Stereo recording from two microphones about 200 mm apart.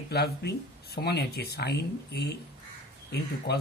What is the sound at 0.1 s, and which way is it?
Speech, 55° left (ahead or behind).